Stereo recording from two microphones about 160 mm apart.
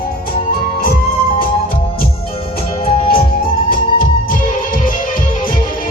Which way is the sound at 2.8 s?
35° left (ahead or behind).